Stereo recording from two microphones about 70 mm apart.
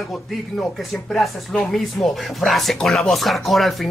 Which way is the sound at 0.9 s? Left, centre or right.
Centre.